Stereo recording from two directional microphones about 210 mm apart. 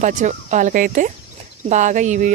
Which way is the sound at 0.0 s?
35° right (ahead or behind).